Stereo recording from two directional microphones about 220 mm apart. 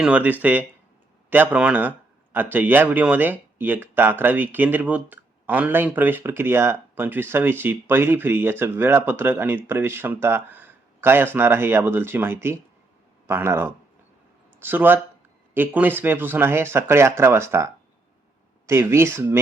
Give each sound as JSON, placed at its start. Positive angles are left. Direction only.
{"t": 0.0, "sound": "speech", "side_deg": -5}